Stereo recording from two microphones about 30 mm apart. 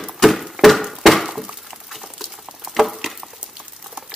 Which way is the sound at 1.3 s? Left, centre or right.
Centre.